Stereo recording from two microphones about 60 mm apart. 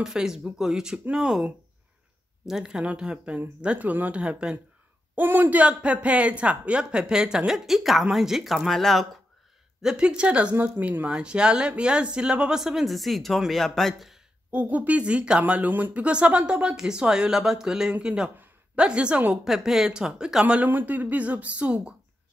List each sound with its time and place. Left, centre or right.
0.0 s speech: centre
2.4 s speech: centre
5.1 s speech: right; by 9.0 s centre
9.8 s speech: centre
14.5 s speech: right
19.3 s speech: centre
20.6 s speech: right